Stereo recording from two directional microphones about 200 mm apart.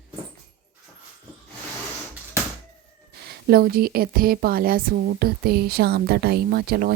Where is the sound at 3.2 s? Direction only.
50° right (ahead or behind).